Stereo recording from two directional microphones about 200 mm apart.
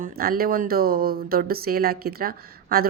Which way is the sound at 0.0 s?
50° right (ahead or behind).